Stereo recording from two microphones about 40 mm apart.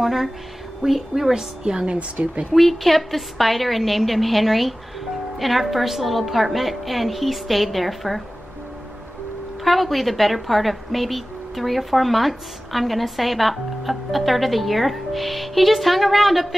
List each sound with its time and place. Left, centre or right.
0.0 s a woman's voice: centre
1.3 s a woman's voice: centre
2.0 s speech: right
2.5 s a woman's voice: centre
9.7 s a woman's voice: centre